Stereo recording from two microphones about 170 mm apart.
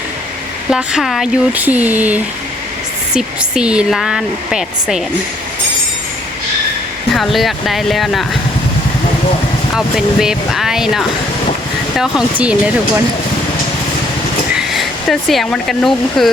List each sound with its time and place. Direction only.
0.7 s a woman's voice: 5° right (ahead or behind)
7.1 s a woman's voice: centre (ahead or behind)
9.7 s a woman's voice: centre (ahead or behind)
14.7 s speech: centre (ahead or behind)